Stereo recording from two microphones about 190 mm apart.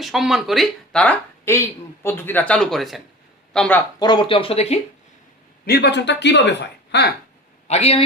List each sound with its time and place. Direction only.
0.0 s speech: centre (ahead or behind)
4.0 s speech: 25° left (ahead or behind)
5.6 s speech: 60° left (ahead or behind)
7.7 s a man's voice: 35° left (ahead or behind)